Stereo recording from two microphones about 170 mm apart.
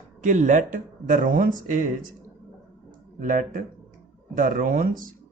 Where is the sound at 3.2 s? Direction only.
50° right (ahead or behind).